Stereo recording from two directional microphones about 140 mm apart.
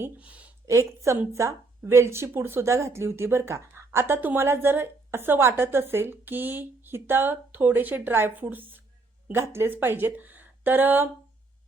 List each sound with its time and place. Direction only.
0.0 s speech: 10° right (ahead or behind)
0.6 s speech: 20° right (ahead or behind)